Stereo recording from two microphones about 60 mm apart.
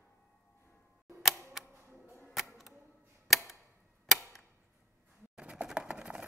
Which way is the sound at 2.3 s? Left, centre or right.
Centre.